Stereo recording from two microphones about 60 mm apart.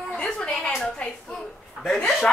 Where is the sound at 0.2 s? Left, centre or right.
Centre.